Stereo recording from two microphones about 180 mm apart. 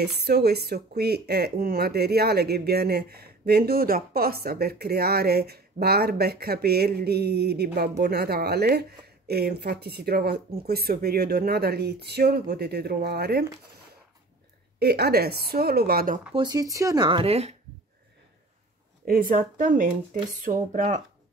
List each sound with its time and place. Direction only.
0.0 s speech: 65° right (ahead or behind)
14.8 s speech: 60° right (ahead or behind)
16.3 s speech: 20° right (ahead or behind)
19.0 s speech: 55° right (ahead or behind)